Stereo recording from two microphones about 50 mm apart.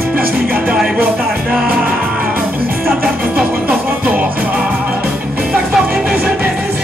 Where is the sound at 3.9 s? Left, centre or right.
Right.